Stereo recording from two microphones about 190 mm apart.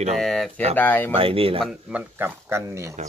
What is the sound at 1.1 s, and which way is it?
Speech, 30° right (ahead or behind).